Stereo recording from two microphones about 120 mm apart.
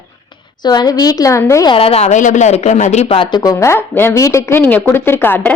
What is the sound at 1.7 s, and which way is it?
Speech, 55° left (ahead or behind).